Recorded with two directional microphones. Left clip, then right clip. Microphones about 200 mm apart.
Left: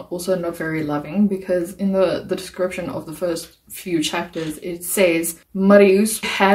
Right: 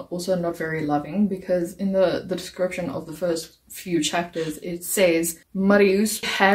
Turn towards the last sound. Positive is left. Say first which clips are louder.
# left 2 dB
turn(degrees=5)  # may be behind; listen again after turning